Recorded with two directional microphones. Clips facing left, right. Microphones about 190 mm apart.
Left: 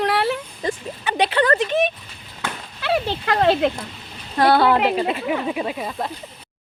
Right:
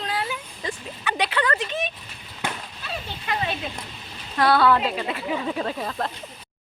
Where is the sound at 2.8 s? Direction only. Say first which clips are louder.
Left 17 dB; 80° left.